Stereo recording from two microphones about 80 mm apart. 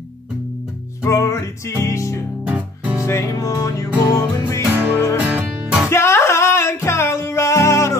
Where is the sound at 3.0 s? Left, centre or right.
Left.